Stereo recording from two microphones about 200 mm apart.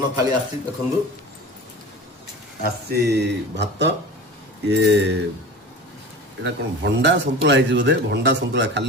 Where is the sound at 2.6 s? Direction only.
55° right (ahead or behind).